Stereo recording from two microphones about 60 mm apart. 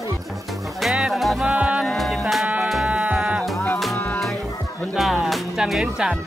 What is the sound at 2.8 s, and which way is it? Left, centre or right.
Music, right.